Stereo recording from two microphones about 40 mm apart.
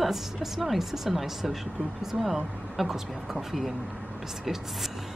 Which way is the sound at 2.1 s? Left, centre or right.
Right.